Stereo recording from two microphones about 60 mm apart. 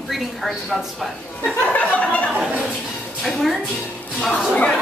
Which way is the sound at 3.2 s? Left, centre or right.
Centre.